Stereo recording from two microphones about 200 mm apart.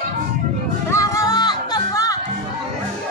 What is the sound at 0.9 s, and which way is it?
Music, 15° left (ahead or behind).